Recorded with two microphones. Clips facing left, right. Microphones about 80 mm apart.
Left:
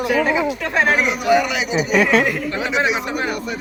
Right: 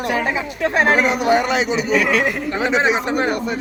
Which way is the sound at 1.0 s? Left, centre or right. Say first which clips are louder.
Right 1 dB; right.